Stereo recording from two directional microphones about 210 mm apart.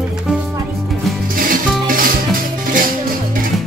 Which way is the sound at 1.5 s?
40° right (ahead or behind).